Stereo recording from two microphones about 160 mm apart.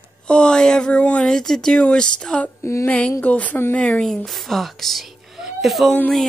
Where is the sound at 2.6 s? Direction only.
15° left (ahead or behind).